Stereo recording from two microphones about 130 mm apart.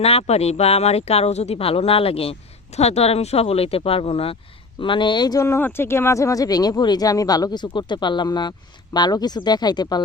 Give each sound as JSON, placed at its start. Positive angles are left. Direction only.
{"t": 0.0, "sound": "speech", "side_deg": 50}